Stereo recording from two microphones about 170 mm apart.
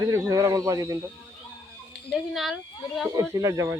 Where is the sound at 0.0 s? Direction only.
20° right (ahead or behind).